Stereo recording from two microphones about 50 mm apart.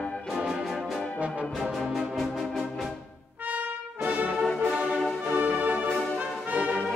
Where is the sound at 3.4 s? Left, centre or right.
Right.